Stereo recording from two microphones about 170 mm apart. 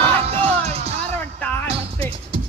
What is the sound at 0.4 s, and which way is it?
Music, 40° right (ahead or behind).